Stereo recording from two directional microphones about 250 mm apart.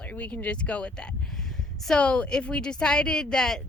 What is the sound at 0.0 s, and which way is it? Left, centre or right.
A woman's voice, centre.